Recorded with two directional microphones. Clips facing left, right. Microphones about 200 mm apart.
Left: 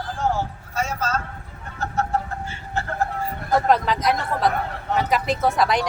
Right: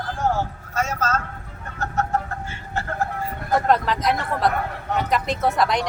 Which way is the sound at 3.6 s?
Centre (ahead or behind).